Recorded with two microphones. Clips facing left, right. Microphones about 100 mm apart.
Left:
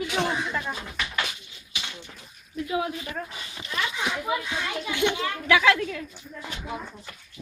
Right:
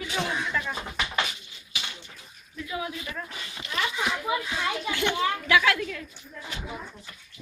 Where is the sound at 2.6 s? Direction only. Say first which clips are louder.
Left 5 dB; 50° left (ahead or behind).